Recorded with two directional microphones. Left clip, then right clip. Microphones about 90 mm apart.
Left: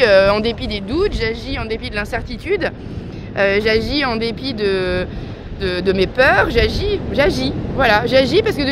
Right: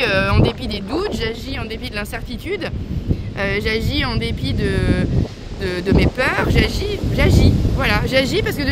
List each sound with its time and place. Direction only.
0.0 s speech: 40° right (ahead or behind)